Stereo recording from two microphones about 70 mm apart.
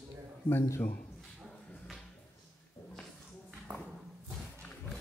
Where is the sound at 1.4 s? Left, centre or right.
Centre.